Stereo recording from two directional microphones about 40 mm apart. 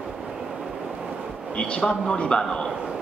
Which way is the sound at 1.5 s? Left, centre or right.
Left.